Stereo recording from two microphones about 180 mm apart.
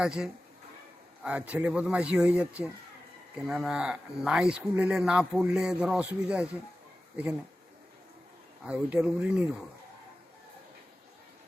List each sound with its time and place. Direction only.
0.0 s speech: 5° right (ahead or behind)
8.6 s speech: 5° right (ahead or behind)